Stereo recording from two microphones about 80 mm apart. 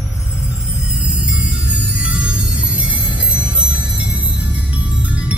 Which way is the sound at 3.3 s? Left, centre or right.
Centre.